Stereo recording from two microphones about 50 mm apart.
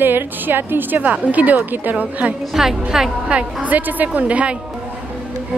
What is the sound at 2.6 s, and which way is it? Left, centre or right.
Speech, centre.